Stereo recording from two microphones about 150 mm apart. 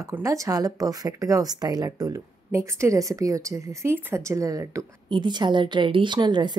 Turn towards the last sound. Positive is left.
turn(degrees=-30)  # may be behind; listen again after turning